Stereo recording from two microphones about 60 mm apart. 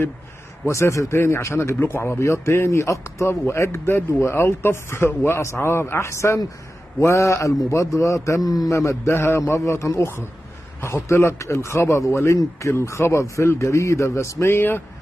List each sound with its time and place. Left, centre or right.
0.7 s a man's voice: left
9.5 s a man's voice: left